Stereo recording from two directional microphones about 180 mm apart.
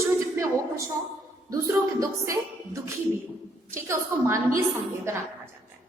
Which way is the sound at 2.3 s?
15° right (ahead or behind).